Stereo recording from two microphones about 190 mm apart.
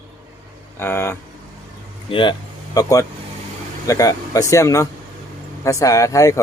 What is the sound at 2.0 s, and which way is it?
Speech, 25° left (ahead or behind).